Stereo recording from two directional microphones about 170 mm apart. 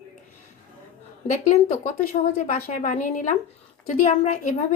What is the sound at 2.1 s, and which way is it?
A woman's voice, 45° left (ahead or behind).